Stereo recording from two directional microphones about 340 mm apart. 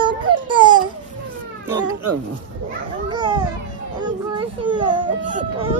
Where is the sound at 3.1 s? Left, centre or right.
Centre.